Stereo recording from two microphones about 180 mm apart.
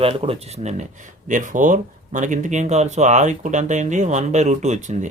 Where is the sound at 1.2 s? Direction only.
45° right (ahead or behind).